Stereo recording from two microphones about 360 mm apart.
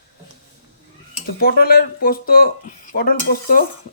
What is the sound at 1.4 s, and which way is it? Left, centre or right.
Speech, left.